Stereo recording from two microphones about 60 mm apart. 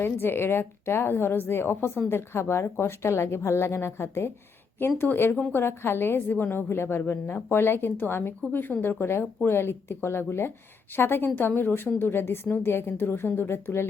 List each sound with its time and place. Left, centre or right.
0.0 s a woman's voice: left